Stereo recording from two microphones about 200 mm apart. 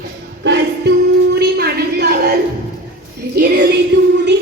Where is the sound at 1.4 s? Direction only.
55° right (ahead or behind).